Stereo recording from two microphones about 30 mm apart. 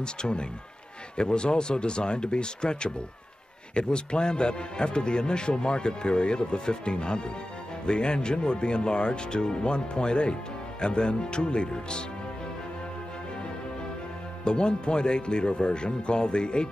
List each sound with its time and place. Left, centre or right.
0.0 s speech: left
14.4 s speech: left